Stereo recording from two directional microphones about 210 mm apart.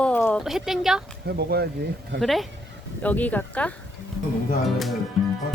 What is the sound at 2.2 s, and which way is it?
Speech, centre (ahead or behind).